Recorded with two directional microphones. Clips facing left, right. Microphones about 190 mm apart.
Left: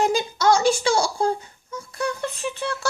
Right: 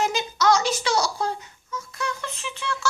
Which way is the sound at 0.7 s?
30° left (ahead or behind).